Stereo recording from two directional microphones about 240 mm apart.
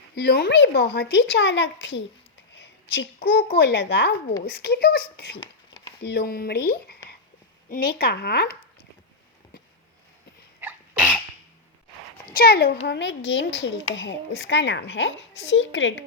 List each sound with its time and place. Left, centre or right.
0.1 s a child's voice: left
10.6 s sneeze: centre
12.2 s speech: left